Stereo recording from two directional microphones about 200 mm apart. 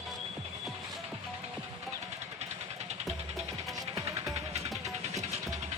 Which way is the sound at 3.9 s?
30° right (ahead or behind).